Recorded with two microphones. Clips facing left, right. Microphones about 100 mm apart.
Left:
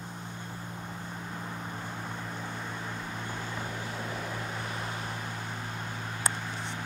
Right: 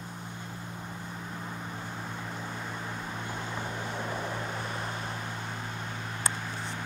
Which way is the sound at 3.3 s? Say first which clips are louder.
Right 1 dB; 20° right (ahead or behind).